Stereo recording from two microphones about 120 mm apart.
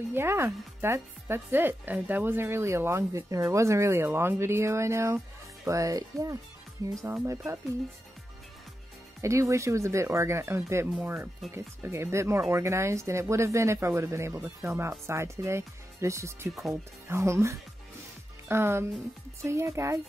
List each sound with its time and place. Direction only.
0.1 s speech: 20° right (ahead or behind)
9.2 s speech: 25° right (ahead or behind)